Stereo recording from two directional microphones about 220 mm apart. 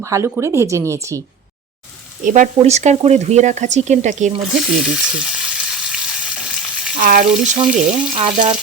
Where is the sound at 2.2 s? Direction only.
35° right (ahead or behind).